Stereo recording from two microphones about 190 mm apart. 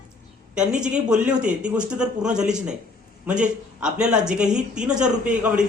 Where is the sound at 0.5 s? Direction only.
5° right (ahead or behind).